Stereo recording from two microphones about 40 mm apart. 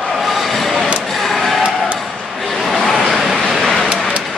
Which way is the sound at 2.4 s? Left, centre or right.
Centre.